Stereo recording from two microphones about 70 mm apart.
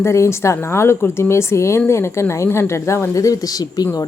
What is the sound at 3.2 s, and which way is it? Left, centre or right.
Speech, left.